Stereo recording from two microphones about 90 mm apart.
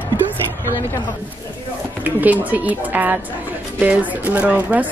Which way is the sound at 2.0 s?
20° right (ahead or behind).